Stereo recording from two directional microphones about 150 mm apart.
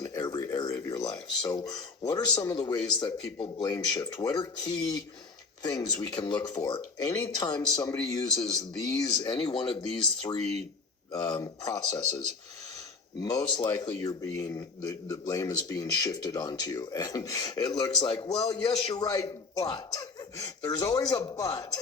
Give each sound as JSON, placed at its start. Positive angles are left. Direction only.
{"t": 0.0, "sound": "speech", "side_deg": 25}
{"t": 11.1, "sound": "speech", "side_deg": 30}
{"t": 13.2, "sound": "speech", "side_deg": 25}